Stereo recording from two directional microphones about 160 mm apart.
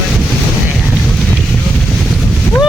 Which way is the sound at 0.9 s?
Centre (ahead or behind).